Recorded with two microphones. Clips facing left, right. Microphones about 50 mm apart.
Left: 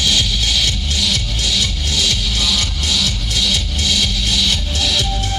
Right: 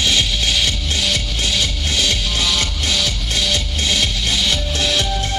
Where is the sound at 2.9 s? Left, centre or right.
Right.